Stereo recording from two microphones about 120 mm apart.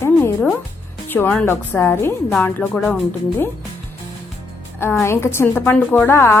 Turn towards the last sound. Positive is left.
turn(degrees=20)  # may be behind; listen again after turning